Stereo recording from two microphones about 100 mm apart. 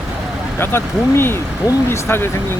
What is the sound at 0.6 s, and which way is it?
Speech, 25° left (ahead or behind).